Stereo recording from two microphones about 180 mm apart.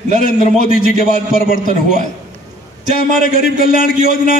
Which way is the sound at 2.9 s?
55° left (ahead or behind).